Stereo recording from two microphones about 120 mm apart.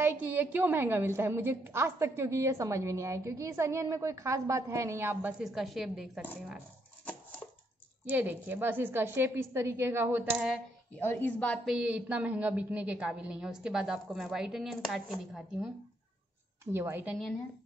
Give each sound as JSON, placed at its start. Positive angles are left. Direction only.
{"t": 0.0, "sound": "a woman's voice", "side_deg": -15}
{"t": 5.4, "sound": "a woman's voice", "side_deg": 0}
{"t": 8.1, "sound": "a woman's voice", "side_deg": -15}
{"t": 10.3, "sound": "a woman's voice", "side_deg": -5}
{"t": 11.0, "sound": "a woman's voice", "side_deg": 20}
{"t": 11.6, "sound": "a woman's voice", "side_deg": -5}
{"t": 16.7, "sound": "a woman's voice", "side_deg": -20}